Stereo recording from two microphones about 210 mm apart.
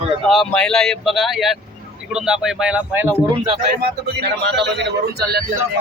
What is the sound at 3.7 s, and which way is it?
Speech, 50° right (ahead or behind).